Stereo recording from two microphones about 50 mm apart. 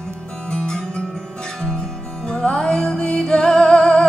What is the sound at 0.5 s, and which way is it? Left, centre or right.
Music, centre.